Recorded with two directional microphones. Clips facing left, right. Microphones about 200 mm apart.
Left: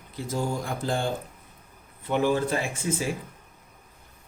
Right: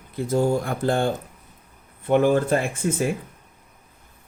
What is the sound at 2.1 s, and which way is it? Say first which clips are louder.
Speech: right 6 dB; 50° right (ahead or behind).